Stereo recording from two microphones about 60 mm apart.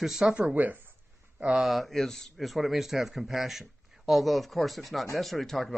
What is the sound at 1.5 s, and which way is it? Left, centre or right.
Speech, centre.